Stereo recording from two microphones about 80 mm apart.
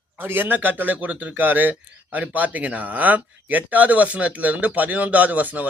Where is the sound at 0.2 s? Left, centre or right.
Right.